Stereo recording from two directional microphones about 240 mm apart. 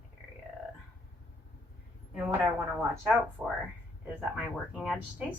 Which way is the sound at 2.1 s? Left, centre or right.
Centre.